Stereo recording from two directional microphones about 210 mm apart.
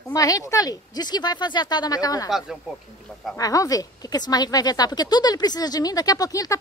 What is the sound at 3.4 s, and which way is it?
Speech, 15° left (ahead or behind).